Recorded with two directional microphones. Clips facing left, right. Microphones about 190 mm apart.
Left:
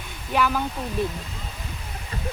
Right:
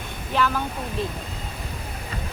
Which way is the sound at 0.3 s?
10° left (ahead or behind).